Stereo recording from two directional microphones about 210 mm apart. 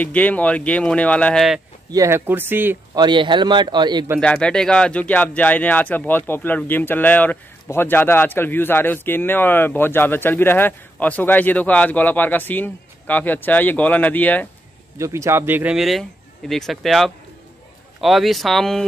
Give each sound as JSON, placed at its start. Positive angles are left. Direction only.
{"t": 0.0, "sound": "speech", "side_deg": 5}
{"t": 1.9, "sound": "speech", "side_deg": -15}
{"t": 3.0, "sound": "a man's voice", "side_deg": -20}
{"t": 4.2, "sound": "speech", "side_deg": 5}
{"t": 15.0, "sound": "speech", "side_deg": -15}